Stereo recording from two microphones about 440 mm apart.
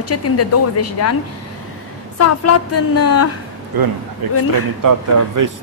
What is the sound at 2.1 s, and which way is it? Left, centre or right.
A woman's voice, left.